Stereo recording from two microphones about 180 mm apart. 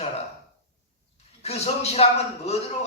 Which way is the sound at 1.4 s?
35° left (ahead or behind).